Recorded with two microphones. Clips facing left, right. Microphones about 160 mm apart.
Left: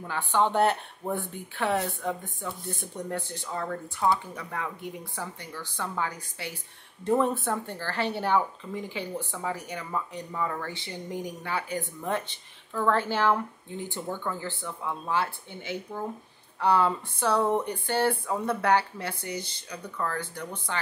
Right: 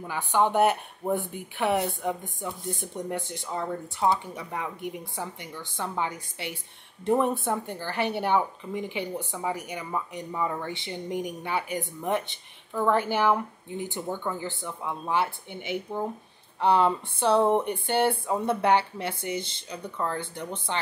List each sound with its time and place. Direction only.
0.0 s a woman's voice: 15° right (ahead or behind)